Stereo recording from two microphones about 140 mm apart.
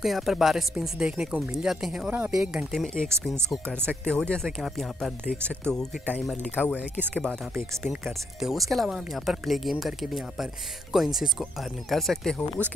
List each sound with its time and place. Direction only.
0.0 s speech: centre (ahead or behind)
7.8 s speech: centre (ahead or behind)